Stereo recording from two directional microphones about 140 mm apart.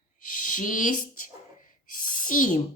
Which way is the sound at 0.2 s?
75° left (ahead or behind).